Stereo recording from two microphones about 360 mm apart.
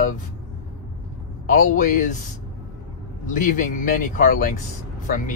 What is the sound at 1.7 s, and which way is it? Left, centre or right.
Speech, left.